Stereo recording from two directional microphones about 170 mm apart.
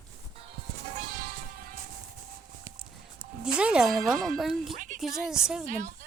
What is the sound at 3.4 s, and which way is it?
Speech, 5° right (ahead or behind).